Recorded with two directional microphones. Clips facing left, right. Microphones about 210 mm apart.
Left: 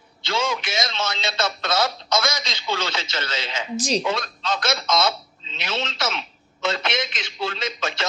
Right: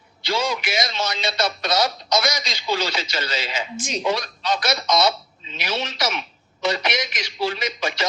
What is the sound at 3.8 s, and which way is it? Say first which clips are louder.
Speech: left 5 dB; 35° left (ahead or behind).